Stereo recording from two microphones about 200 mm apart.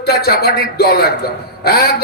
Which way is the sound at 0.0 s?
50° left (ahead or behind).